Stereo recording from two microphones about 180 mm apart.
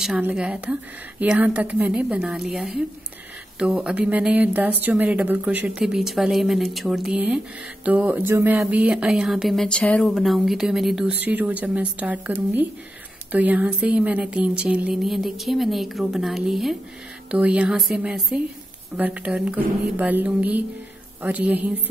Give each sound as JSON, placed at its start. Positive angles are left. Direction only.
{"t": 0.0, "sound": "a woman's voice", "side_deg": -5}